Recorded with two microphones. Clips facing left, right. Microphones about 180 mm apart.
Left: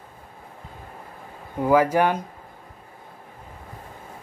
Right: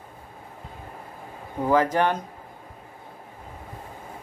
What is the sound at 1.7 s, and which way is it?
Speech, 10° left (ahead or behind).